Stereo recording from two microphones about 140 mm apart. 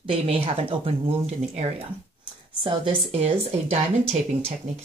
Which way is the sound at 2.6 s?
35° right (ahead or behind).